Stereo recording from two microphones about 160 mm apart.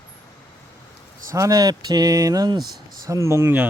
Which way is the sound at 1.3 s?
20° right (ahead or behind).